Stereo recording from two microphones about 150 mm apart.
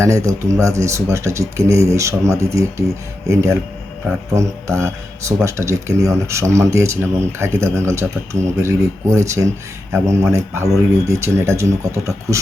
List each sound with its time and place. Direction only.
0.0 s speech: 20° right (ahead or behind)